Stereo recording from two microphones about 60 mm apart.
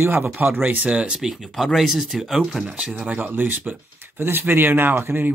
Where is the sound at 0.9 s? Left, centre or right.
Centre.